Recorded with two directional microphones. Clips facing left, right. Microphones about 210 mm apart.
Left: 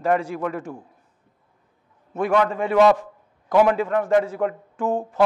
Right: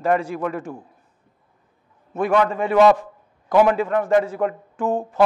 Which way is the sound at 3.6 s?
10° right (ahead or behind).